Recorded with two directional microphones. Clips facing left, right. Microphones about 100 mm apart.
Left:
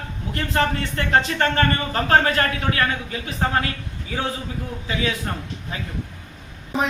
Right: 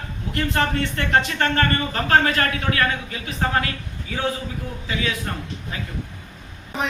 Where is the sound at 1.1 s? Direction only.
30° left (ahead or behind).